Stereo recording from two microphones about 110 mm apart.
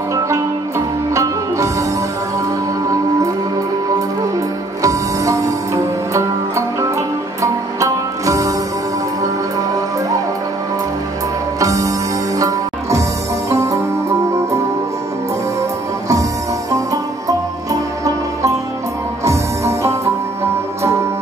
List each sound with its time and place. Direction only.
0.1 s music: 25° right (ahead or behind)
4.8 s music: 30° right (ahead or behind)
11.6 s music: 30° right (ahead or behind)
16.7 s music: 30° right (ahead or behind)